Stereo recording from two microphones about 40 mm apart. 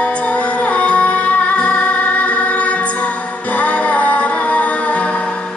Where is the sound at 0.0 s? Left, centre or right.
Left.